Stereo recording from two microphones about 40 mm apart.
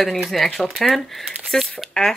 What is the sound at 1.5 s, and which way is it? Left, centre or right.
Speech, centre.